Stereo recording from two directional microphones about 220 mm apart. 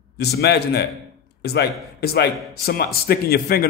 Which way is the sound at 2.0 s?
45° left (ahead or behind).